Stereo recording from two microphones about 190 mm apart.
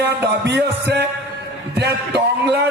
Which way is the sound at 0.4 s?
65° right (ahead or behind).